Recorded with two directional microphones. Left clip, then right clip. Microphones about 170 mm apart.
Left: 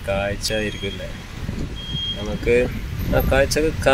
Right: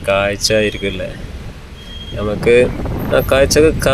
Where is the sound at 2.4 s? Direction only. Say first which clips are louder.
Right 8 dB; 25° right (ahead or behind).